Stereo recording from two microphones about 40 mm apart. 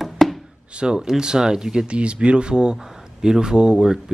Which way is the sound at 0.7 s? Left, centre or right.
Centre.